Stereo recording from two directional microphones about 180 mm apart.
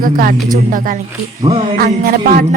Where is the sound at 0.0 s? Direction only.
55° right (ahead or behind).